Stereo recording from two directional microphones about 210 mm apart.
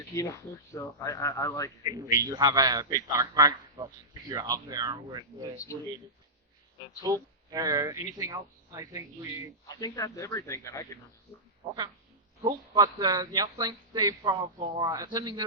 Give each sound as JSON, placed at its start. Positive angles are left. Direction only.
{"t": 0.1, "sound": "speech", "side_deg": 15}
{"t": 1.8, "sound": "a man's voice", "side_deg": -20}
{"t": 7.0, "sound": "a man's voice", "side_deg": -15}
{"t": 9.6, "sound": "speech", "side_deg": 15}
{"t": 11.6, "sound": "a man's voice", "side_deg": -20}